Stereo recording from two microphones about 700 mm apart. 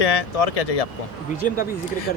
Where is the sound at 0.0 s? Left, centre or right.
Left.